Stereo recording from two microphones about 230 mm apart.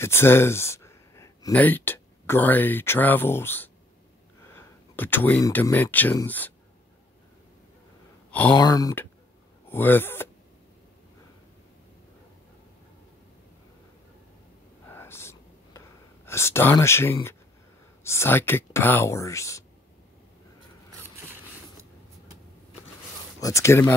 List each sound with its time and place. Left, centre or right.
0.0 s speech: centre
8.3 s speech: centre
14.9 s whispering: centre
18.0 s speech: centre
23.4 s speech: centre